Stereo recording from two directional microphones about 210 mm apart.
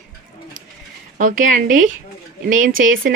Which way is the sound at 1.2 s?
40° right (ahead or behind).